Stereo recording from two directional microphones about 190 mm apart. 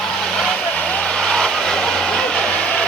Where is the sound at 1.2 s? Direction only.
5° left (ahead or behind).